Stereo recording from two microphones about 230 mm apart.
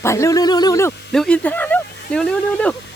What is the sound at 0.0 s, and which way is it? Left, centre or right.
Speech, centre.